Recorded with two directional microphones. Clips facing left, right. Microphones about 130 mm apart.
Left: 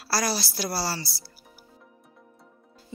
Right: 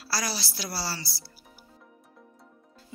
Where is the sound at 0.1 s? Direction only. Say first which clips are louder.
Left 5 dB; 45° left (ahead or behind).